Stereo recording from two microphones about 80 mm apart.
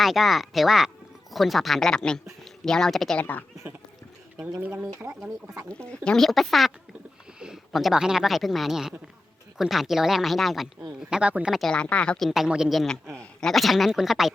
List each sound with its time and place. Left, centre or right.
0.0 s speech: centre
3.2 s speech: left
3.6 s speech: right
5.7 s speech: centre
11.1 s speech: centre
11.7 s speech: centre
12.3 s speech: centre